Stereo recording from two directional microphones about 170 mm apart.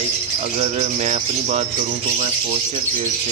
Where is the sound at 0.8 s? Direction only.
40° right (ahead or behind).